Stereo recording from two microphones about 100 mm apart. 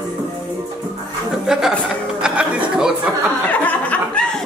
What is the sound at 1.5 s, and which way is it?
Speech, 5° right (ahead or behind).